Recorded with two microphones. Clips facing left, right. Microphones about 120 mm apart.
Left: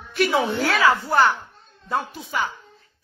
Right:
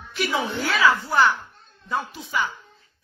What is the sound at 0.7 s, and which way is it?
Speech, 45° left (ahead or behind).